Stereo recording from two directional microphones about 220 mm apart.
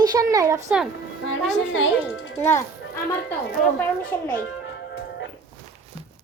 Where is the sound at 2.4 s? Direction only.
10° left (ahead or behind).